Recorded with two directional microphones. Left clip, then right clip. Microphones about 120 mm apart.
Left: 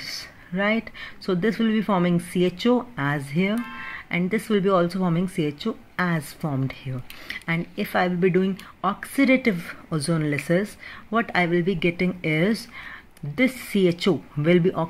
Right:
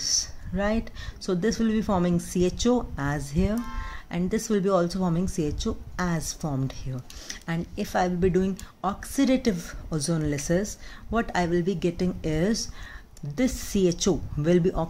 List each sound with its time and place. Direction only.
0.0 s speech: centre (ahead or behind)